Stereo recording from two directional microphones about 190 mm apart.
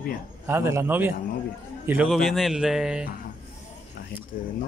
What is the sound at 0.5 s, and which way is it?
A man's voice, 15° right (ahead or behind).